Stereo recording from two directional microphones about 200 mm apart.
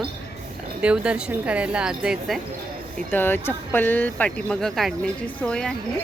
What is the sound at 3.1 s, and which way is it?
Speech, 10° left (ahead or behind).